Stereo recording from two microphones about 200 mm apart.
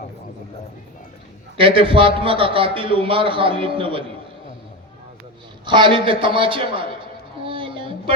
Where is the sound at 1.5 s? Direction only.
25° right (ahead or behind).